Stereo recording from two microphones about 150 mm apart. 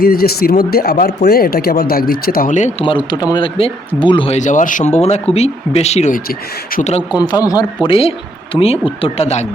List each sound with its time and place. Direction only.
0.0 s speech: 90° left; by 2.8 s 50° left (ahead or behind)
2.8 s a man's voice: 35° left (ahead or behind)
4.4 s speech: 55° left (ahead or behind)
7.1 s a man's voice: 25° left (ahead or behind); by 9.5 s 45° left (ahead or behind)